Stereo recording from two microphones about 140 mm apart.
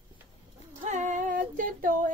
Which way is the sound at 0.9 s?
60° right (ahead or behind).